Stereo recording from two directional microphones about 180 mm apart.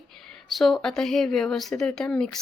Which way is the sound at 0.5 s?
Centre (ahead or behind).